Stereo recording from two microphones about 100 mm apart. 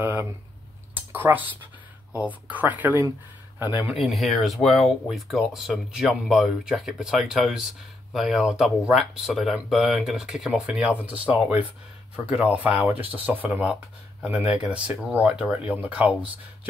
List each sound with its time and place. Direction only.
1.1 s speech: 20° right (ahead or behind)
3.9 s speech: centre (ahead or behind)